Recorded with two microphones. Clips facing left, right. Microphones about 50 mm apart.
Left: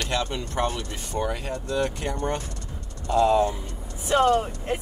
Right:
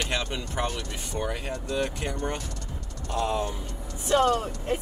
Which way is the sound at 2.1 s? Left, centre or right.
Left.